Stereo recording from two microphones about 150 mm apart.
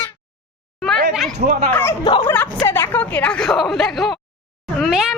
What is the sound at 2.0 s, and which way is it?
Speech, 30° left (ahead or behind).